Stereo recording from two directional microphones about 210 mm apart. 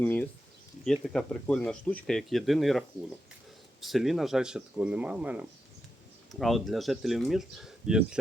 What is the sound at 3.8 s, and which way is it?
Speech, centre (ahead or behind).